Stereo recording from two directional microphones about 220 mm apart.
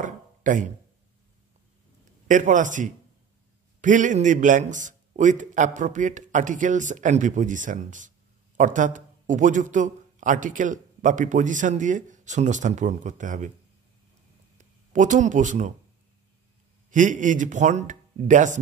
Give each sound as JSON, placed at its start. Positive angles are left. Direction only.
{"t": 0.0, "sound": "a sound", "side_deg": -35}
{"t": 2.2, "sound": "a man's voice", "side_deg": -35}
{"t": 14.6, "sound": "speech", "side_deg": -35}
{"t": 16.9, "sound": "a man's voice", "side_deg": -35}